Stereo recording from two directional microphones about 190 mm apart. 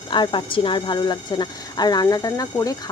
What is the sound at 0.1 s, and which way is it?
Speech, 25° left (ahead or behind).